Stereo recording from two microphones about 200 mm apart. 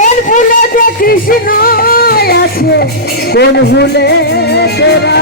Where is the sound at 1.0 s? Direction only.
45° left (ahead or behind).